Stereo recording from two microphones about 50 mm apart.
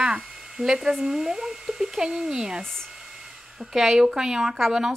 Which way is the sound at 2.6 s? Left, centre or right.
Centre.